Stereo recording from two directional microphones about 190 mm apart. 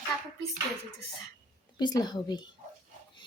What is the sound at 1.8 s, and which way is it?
Speech, 20° left (ahead or behind).